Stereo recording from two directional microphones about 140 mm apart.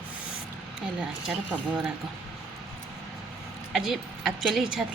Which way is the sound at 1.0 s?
5° right (ahead or behind).